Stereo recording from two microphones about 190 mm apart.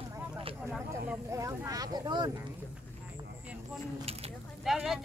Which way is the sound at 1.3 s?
15° right (ahead or behind).